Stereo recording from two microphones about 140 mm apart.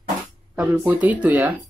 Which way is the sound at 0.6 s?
10° right (ahead or behind).